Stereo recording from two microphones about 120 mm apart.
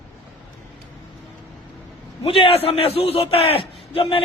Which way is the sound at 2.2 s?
50° left (ahead or behind).